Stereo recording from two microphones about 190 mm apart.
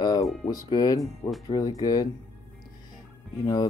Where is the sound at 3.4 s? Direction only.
20° left (ahead or behind).